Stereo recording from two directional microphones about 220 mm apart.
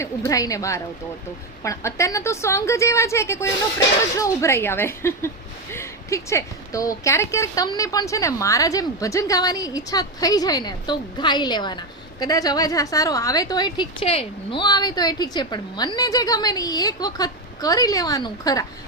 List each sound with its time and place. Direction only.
0.0 s speech: 15° left (ahead or behind)